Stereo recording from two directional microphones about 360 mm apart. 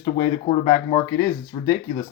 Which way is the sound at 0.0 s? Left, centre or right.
Centre.